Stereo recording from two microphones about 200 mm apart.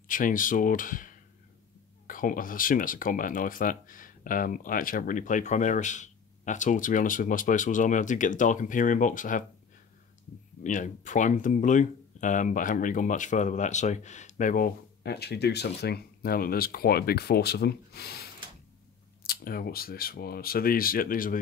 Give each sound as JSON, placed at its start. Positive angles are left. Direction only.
{"t": 0.1, "sound": "speech", "side_deg": 40}
{"t": 10.6, "sound": "speech", "side_deg": 40}